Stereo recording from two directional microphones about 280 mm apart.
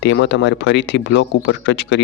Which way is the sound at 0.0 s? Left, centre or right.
Left.